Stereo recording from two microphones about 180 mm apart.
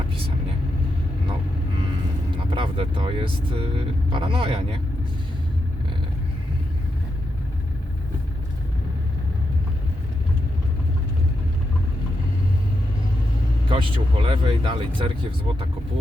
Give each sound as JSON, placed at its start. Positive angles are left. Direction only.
{"t": 2.5, "sound": "speech", "side_deg": -30}
{"t": 13.7, "sound": "speech", "side_deg": -30}